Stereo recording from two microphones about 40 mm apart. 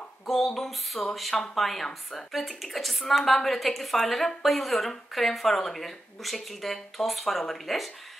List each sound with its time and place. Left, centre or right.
0.6 s a woman's voice: centre
2.3 s a woman's voice: centre